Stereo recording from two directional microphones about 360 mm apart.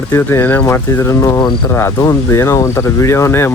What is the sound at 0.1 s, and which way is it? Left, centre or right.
Speech, centre.